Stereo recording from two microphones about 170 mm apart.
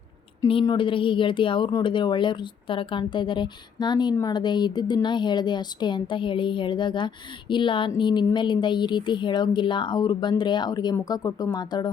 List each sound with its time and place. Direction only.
0.6 s speech: 25° left (ahead or behind)